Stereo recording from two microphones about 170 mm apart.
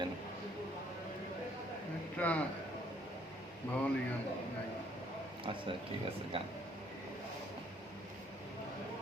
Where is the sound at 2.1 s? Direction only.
10° left (ahead or behind).